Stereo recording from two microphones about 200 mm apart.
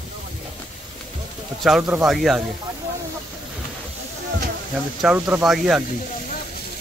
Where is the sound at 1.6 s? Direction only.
Centre (ahead or behind).